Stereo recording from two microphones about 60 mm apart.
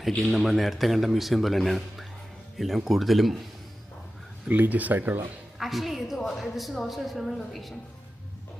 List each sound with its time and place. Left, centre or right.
0.3 s a woman's voice: centre
4.4 s speech: right
5.5 s a woman's voice: centre